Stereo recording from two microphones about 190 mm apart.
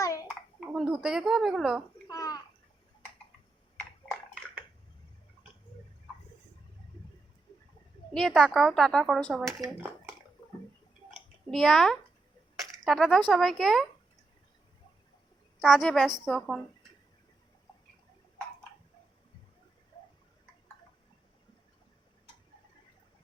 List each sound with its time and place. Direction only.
0.0 s a sound: 15° left (ahead or behind)
0.3 s a sound: 5° right (ahead or behind)
2.0 s bathtub: 20° left (ahead or behind)
8.1 s a woman's voice: centre (ahead or behind)
9.6 s speech: 10° right (ahead or behind)
11.5 s a woman's voice: centre (ahead or behind)
15.6 s a woman's voice: centre (ahead or behind)